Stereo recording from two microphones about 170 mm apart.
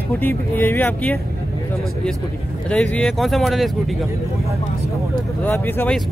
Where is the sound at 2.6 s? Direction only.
5° left (ahead or behind).